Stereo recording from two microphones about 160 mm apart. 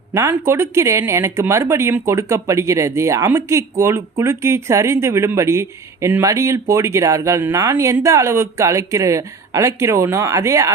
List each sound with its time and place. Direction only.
0.1 s speech: 15° right (ahead or behind)